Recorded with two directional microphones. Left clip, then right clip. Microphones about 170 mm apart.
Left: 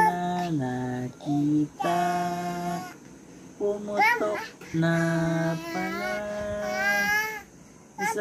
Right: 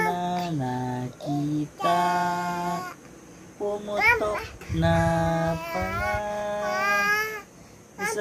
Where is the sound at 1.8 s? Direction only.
15° right (ahead or behind).